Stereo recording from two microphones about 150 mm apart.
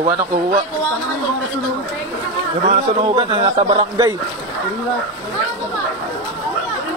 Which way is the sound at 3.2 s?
35° right (ahead or behind).